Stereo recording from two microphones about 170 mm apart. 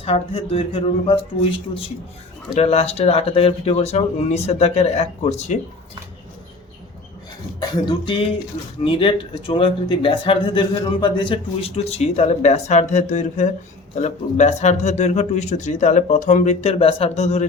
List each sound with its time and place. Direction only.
0.0 s speech: 35° left (ahead or behind)
7.7 s speech: 30° left (ahead or behind)